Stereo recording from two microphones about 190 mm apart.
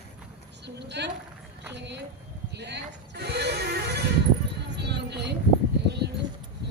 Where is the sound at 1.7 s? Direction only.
65° right (ahead or behind).